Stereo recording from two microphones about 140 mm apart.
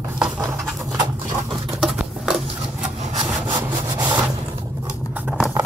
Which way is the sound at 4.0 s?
25° right (ahead or behind).